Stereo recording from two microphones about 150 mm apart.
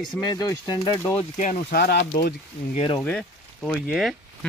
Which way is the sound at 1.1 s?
55° left (ahead or behind).